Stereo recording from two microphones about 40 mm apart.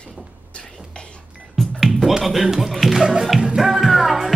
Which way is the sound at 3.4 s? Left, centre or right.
Centre.